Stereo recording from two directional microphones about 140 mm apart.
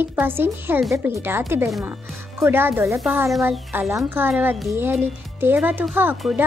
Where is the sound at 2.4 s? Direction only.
15° right (ahead or behind).